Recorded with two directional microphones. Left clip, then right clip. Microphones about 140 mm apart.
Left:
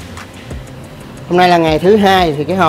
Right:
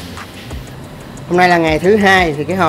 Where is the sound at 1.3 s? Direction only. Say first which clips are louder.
Left 1 dB; 20° left (ahead or behind).